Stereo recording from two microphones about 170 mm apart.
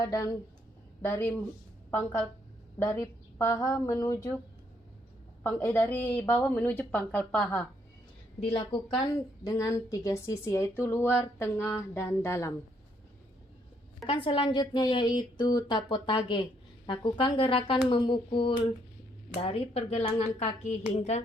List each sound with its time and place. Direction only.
0.0 s a woman's voice: 20° left (ahead or behind)
5.4 s a woman's voice: 10° left (ahead or behind)
8.4 s a woman's voice: 30° left (ahead or behind); by 12.5 s 15° left (ahead or behind)
14.1 s a woman's voice: 30° left (ahead or behind)